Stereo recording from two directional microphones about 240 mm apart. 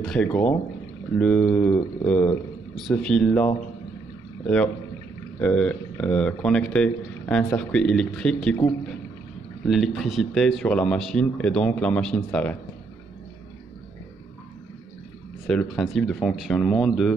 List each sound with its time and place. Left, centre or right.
0.0 s speech: centre
5.4 s speech: centre
9.7 s speech: centre
15.4 s speech: centre